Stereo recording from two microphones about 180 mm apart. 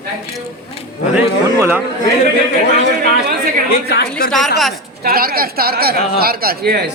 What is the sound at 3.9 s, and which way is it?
Speech, 60° left (ahead or behind).